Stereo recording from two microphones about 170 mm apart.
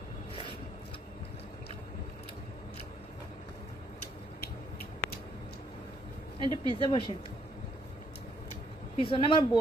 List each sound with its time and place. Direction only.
6.4 s speech: 25° right (ahead or behind)
6.9 s speech: 25° left (ahead or behind)
8.9 s speech: 30° left (ahead or behind)